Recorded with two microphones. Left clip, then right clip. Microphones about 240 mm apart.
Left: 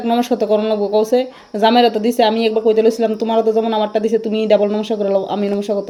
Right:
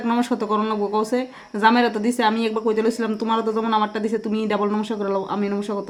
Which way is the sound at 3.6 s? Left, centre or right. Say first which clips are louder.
Left 5 dB; centre.